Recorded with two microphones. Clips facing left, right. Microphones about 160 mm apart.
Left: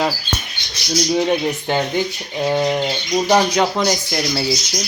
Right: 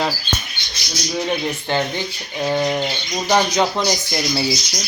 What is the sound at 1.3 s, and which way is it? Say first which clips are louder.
Speech: left 3 dB; 15° left (ahead or behind).